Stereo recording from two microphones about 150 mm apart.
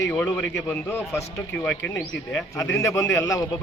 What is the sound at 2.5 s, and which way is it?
Speech, 20° left (ahead or behind).